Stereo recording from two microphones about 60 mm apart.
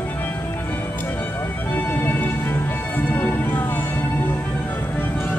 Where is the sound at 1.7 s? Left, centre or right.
Left.